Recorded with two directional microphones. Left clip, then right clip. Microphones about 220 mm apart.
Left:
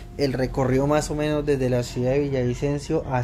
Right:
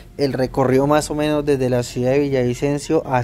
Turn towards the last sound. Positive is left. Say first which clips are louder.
# right 6 dB
turn(degrees=-45)  # may be behind; listen again after turning